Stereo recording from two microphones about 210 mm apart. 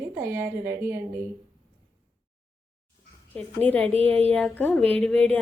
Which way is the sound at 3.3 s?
5° left (ahead or behind).